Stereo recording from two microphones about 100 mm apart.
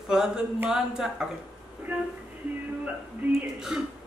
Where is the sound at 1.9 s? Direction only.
15° right (ahead or behind).